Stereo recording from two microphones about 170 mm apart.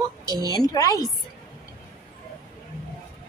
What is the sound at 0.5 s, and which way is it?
Speech, 20° left (ahead or behind).